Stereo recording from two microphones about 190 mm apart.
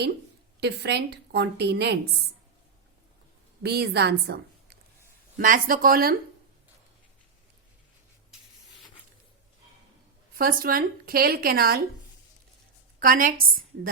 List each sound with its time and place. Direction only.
0.6 s a woman's voice: 60° right (ahead or behind)
3.6 s a woman's voice: 60° right (ahead or behind)
5.4 s a woman's voice: 45° right (ahead or behind)
10.3 s a woman's voice: 50° right (ahead or behind)
13.0 s a woman's voice: 50° right (ahead or behind)